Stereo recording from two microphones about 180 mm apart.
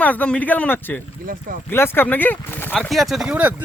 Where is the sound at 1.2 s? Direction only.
50° right (ahead or behind).